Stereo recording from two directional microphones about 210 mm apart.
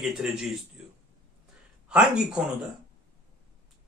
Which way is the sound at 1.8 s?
5° right (ahead or behind).